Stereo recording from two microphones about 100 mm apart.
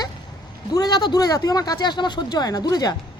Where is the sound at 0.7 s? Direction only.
45° left (ahead or behind).